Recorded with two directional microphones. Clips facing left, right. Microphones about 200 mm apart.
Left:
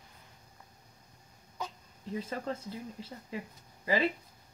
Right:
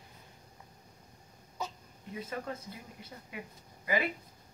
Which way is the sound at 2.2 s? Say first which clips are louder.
Left 3 dB; 30° left (ahead or behind).